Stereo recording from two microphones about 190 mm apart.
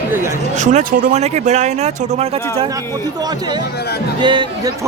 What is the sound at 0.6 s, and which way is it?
Speech, 40° right (ahead or behind).